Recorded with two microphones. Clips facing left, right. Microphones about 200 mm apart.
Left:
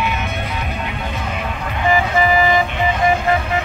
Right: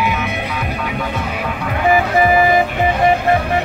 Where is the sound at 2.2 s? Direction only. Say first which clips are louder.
Right 3 dB; 50° right (ahead or behind).